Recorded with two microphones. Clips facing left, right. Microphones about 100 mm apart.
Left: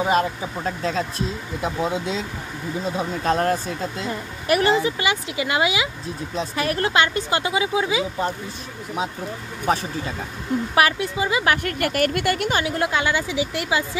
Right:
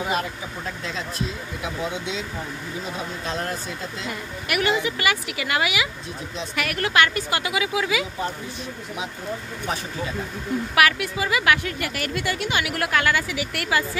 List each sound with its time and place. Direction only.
0.0 s speech: 30° left (ahead or behind)
3.3 s speech: 45° left (ahead or behind)
4.1 s speech: 30° left (ahead or behind)
10.7 s speech: 30° left (ahead or behind)
11.6 s speech: 50° left (ahead or behind)
12.5 s speech: 25° left (ahead or behind)